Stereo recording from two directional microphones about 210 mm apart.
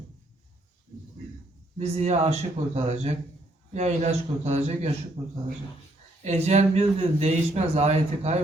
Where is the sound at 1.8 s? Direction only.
30° right (ahead or behind).